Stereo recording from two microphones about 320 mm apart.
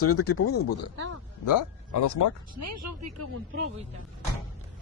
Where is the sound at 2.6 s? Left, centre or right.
Right.